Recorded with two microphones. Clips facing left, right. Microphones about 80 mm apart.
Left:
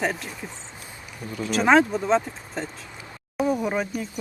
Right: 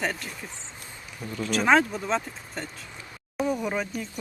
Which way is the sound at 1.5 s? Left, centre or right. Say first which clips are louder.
Left 3 dB; centre.